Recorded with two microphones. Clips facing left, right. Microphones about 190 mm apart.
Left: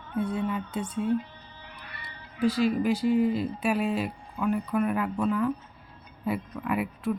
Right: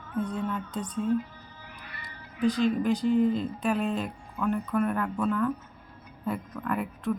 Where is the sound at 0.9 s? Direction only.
30° left (ahead or behind).